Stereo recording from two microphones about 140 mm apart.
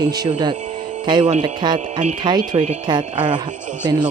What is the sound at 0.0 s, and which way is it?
Speech, 30° right (ahead or behind).